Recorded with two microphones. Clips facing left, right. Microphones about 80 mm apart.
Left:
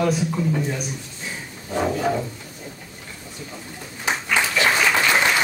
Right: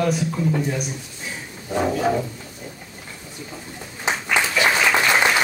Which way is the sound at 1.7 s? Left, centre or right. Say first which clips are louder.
Right 1 dB; centre.